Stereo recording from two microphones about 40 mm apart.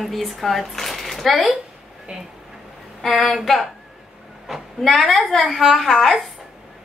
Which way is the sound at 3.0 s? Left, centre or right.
Centre.